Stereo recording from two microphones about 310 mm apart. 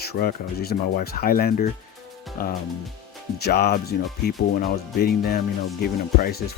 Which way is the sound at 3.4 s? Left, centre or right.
Left.